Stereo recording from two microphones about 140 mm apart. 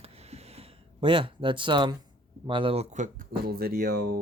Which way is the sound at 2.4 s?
40° right (ahead or behind).